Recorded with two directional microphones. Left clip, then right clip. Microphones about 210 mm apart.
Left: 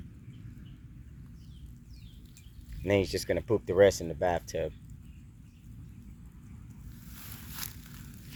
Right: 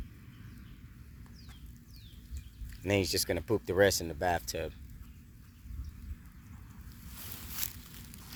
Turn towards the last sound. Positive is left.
turn(degrees=-20)  # may be behind; listen again after turning